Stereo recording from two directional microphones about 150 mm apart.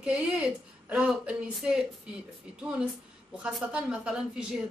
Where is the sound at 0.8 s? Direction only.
5° right (ahead or behind).